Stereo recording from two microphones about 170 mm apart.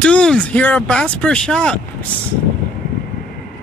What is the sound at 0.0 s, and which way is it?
Speech, 5° left (ahead or behind).